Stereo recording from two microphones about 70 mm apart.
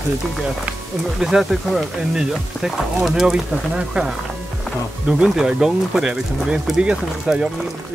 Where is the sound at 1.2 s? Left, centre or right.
Centre.